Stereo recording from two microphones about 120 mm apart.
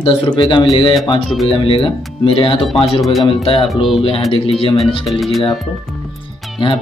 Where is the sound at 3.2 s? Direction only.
50° left (ahead or behind).